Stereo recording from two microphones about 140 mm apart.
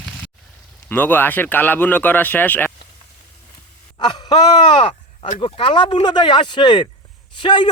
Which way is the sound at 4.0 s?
30° left (ahead or behind).